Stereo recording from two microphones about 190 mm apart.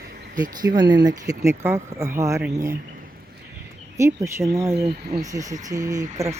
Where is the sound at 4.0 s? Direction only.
15° right (ahead or behind).